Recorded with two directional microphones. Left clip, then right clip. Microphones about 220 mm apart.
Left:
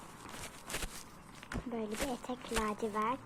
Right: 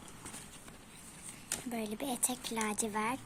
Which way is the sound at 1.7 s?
55° right (ahead or behind).